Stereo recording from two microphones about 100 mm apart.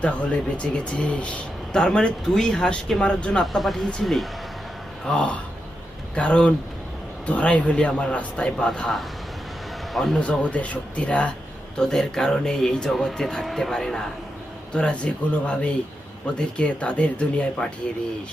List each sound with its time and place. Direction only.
0.0 s speech: 10° left (ahead or behind)